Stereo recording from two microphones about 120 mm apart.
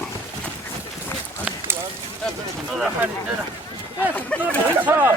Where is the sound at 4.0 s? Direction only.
15° left (ahead or behind).